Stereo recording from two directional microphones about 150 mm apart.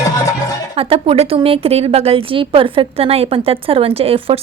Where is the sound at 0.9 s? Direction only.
40° right (ahead or behind).